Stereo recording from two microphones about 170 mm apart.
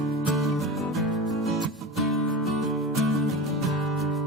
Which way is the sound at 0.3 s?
Centre (ahead or behind).